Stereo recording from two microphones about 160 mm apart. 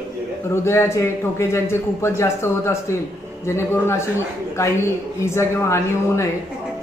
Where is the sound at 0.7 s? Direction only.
15° left (ahead or behind).